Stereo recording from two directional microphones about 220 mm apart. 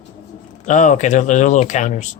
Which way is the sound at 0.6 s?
35° left (ahead or behind).